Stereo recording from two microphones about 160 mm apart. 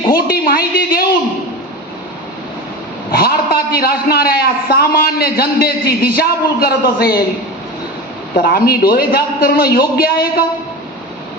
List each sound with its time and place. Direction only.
0.1 s a man's voice: 70° left (ahead or behind)
3.1 s a man's voice: 70° left (ahead or behind)
8.4 s a man's voice: 70° left (ahead or behind)